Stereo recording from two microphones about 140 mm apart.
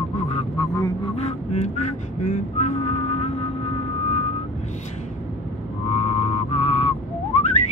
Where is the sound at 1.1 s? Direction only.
50° left (ahead or behind).